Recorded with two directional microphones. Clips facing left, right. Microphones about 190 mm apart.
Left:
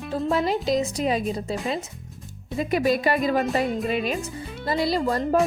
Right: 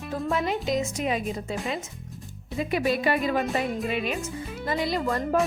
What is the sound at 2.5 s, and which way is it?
Speech, 40° left (ahead or behind).